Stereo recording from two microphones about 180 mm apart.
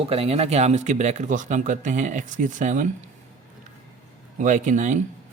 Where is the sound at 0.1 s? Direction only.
35° right (ahead or behind).